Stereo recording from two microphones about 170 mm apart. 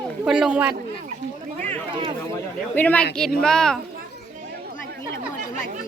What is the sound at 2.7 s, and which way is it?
Speech, 10° left (ahead or behind).